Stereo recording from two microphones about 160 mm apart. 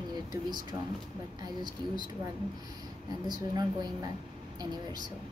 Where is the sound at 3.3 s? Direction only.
25° right (ahead or behind).